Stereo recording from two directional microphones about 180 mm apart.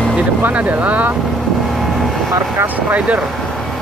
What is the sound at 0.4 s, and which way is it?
Speech, 10° right (ahead or behind).